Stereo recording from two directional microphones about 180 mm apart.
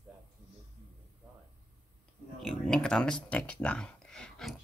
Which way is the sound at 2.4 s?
5° left (ahead or behind).